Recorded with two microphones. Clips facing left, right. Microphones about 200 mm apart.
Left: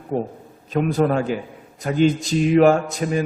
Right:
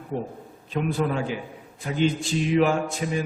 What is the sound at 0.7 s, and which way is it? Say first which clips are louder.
A man's voice: left 6 dB; 45° left (ahead or behind).